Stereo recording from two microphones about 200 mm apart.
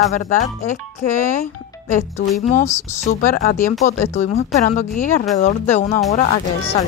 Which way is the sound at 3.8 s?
35° left (ahead or behind).